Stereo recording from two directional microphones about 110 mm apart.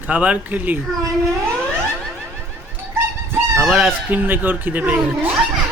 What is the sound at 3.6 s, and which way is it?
Speech, centre (ahead or behind).